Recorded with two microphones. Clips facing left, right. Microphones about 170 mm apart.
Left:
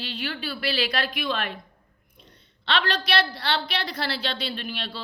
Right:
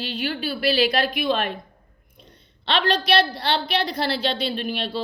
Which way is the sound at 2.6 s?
20° right (ahead or behind).